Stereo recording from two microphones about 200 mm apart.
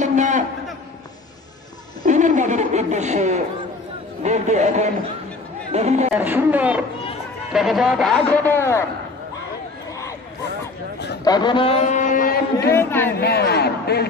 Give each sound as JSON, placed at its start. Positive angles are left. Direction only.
{"t": 0.0, "sound": "a sound", "side_deg": -35}
{"t": 2.0, "sound": "a sound", "side_deg": -40}
{"t": 4.2, "sound": "a man's voice", "side_deg": -35}
{"t": 6.1, "sound": "a man's voice", "side_deg": -10}
{"t": 11.2, "sound": "a man's voice", "side_deg": 20}
{"t": 12.7, "sound": "speech", "side_deg": 10}
{"t": 13.2, "sound": "speech", "side_deg": 55}